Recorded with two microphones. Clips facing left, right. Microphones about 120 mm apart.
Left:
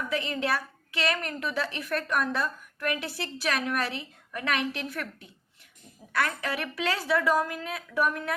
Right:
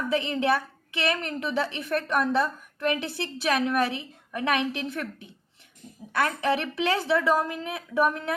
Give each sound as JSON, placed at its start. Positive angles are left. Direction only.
{"t": 0.1, "sound": "a woman's voice", "side_deg": -20}